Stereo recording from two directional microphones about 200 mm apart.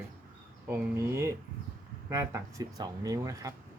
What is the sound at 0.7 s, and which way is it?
Speech, 15° right (ahead or behind).